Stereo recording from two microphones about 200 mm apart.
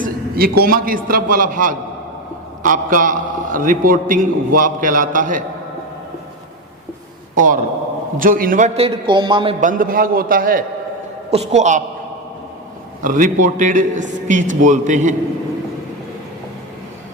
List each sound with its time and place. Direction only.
0.0 s a man's voice: 50° right (ahead or behind)
7.3 s a man's voice: 40° right (ahead or behind); by 9.6 s 25° right (ahead or behind)
9.6 s a man's voice: 40° right (ahead or behind)
11.3 s a man's voice: 35° right (ahead or behind)
13.0 s a man's voice: 40° right (ahead or behind)